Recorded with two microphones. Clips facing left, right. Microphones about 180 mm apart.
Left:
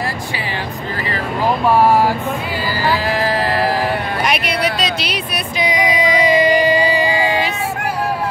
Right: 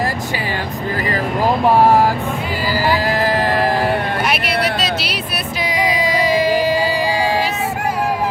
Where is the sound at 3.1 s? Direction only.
45° right (ahead or behind).